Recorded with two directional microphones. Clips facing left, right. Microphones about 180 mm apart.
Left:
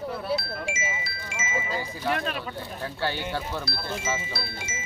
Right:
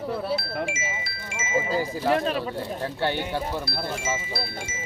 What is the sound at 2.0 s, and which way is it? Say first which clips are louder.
Speech: right 4 dB; 30° right (ahead or behind).